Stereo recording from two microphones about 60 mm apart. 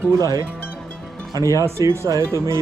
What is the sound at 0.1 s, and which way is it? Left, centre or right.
Speech, right.